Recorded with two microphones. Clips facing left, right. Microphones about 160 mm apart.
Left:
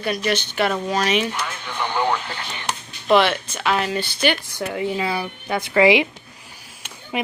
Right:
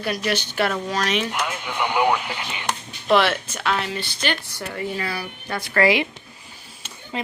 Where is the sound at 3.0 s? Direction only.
Centre (ahead or behind).